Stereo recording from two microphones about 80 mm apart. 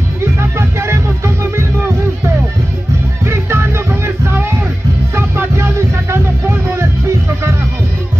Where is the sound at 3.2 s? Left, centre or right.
Right.